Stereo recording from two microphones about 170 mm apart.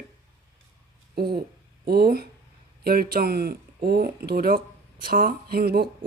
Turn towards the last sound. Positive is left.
turn(degrees=-65)  # may be behind; listen again after turning